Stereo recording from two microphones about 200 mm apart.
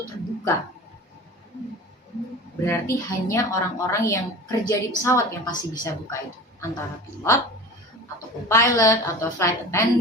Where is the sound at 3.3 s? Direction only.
15° left (ahead or behind).